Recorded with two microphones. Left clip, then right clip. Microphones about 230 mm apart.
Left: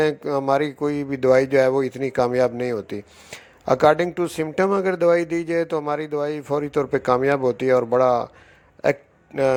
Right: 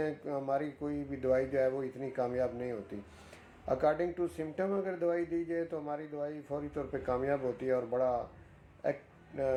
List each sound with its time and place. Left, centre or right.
0.0 s speech: left
8.8 s hiccup: left